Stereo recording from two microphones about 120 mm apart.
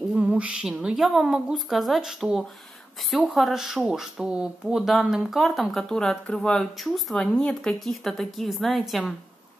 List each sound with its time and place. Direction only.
0.1 s speech: 10° right (ahead or behind)